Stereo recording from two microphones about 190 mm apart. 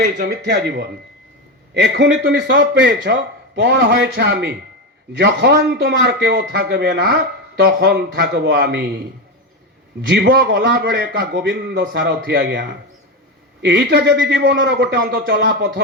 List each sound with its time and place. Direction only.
0.0 s a man's voice: 55° right (ahead or behind)
10.1 s a man's voice: 55° right (ahead or behind)